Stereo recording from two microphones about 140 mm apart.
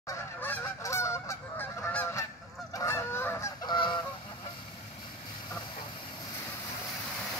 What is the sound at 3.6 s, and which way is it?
Goose, 35° left (ahead or behind).